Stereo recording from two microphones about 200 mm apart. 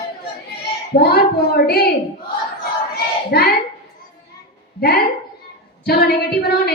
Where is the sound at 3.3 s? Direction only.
55° left (ahead or behind).